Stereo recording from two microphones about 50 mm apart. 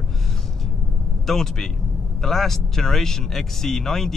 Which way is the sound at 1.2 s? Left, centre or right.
Centre.